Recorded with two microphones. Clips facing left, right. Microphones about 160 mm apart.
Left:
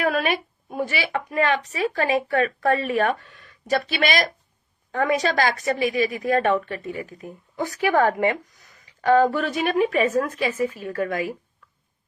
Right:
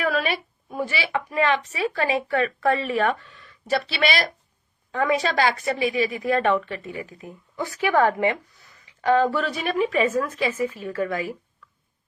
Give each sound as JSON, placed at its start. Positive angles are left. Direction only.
{"t": 0.0, "sound": "a woman's voice", "side_deg": 50}